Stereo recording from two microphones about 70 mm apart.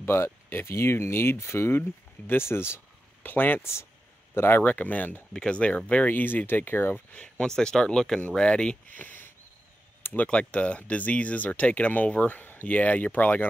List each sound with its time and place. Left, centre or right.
0.0 s a man's voice: left
4.6 s speech: left
7.2 s speech: centre
8.8 s speech: left